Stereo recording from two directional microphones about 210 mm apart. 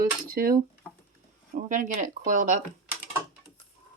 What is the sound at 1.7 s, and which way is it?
Speech, 35° right (ahead or behind).